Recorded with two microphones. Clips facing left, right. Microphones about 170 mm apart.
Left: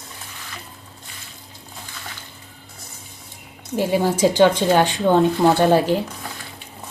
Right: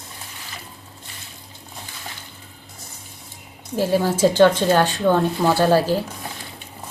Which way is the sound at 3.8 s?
15° left (ahead or behind).